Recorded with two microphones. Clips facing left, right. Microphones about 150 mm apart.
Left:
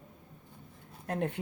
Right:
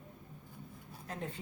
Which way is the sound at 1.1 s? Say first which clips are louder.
Left 9 dB; 65° left (ahead or behind).